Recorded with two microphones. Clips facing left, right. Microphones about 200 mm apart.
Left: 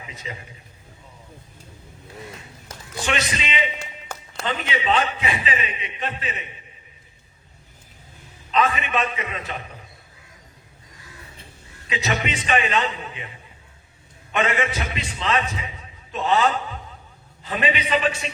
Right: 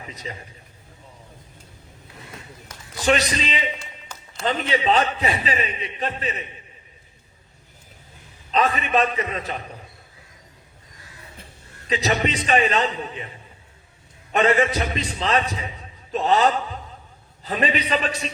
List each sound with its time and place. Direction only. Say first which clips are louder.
0.0 s a man's voice: right 1 dB; 35° right (ahead or behind)
3.0 s a man's voice: right 5 dB; 35° right (ahead or behind)
8.4 s a man's voice: even; 35° right (ahead or behind)
11.9 s a man's voice: right 3 dB; 35° right (ahead or behind)
14.3 s a man's voice: right 4 dB; 35° right (ahead or behind)